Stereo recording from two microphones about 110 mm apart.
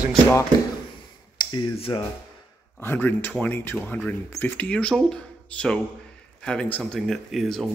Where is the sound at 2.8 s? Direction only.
20° left (ahead or behind).